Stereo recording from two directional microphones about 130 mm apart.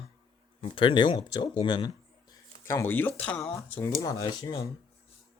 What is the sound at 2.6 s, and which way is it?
Speech, 20° left (ahead or behind).